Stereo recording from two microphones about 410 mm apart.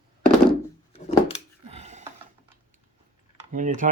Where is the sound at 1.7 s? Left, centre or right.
Centre.